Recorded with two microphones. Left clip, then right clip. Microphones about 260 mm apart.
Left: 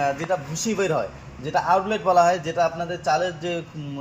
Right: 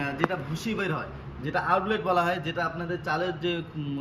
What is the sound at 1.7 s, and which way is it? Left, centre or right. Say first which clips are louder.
A man's voice: left 6 dB; centre.